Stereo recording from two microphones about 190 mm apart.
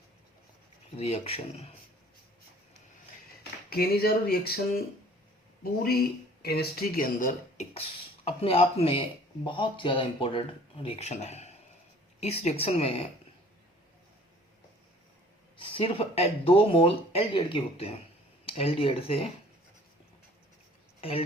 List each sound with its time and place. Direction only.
0.9 s speech: 35° left (ahead or behind)
3.7 s speech: 55° left (ahead or behind); by 13.1 s 30° left (ahead or behind)
15.5 s speech: 25° left (ahead or behind)
21.0 s speech: 30° left (ahead or behind)